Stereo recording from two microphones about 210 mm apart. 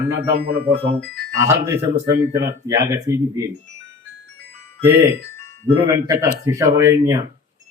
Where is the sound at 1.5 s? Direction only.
15° right (ahead or behind).